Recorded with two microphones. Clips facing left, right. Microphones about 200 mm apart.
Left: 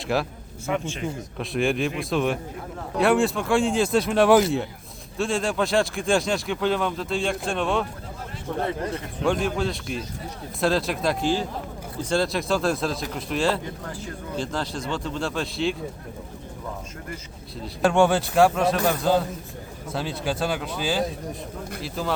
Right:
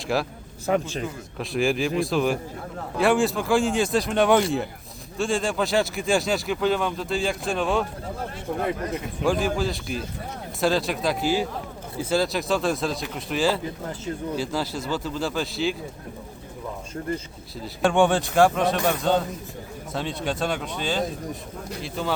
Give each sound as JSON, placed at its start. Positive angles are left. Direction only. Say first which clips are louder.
{"t": 0.1, "sound": "speech", "louder": "even", "side_deg": 0}
{"t": 0.7, "sound": "speech", "louder": "right 4 dB", "side_deg": -35}
{"t": 1.4, "sound": "speech", "louder": "right 1 dB", "side_deg": 0}
{"t": 9.2, "sound": "speech", "louder": "even", "side_deg": 0}
{"t": 17.6, "sound": "speech", "louder": "left 1 dB", "side_deg": 0}